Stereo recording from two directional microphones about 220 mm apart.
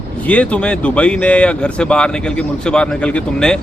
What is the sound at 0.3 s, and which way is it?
Speech, 5° left (ahead or behind).